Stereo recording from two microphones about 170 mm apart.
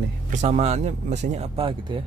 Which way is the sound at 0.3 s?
45° right (ahead or behind).